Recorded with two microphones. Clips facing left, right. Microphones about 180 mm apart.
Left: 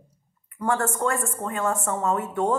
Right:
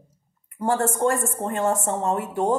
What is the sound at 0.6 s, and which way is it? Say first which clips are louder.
Speech: right 3 dB; 30° right (ahead or behind).